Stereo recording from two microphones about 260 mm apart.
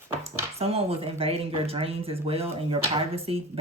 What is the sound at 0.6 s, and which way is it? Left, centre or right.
Speech, right.